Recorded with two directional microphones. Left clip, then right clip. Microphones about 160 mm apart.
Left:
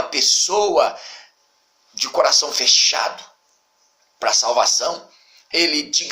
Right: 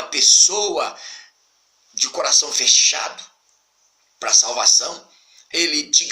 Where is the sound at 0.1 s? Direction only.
25° right (ahead or behind).